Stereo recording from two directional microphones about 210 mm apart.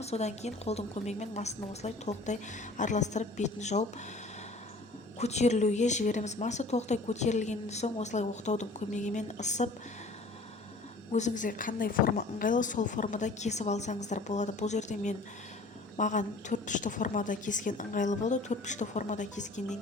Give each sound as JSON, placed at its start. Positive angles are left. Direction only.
{"t": 0.0, "sound": "speech", "side_deg": 30}
{"t": 5.2, "sound": "speech", "side_deg": 30}
{"t": 11.1, "sound": "speech", "side_deg": 35}